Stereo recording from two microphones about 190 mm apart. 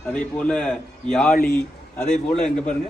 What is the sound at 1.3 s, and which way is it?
Speech, 50° left (ahead or behind).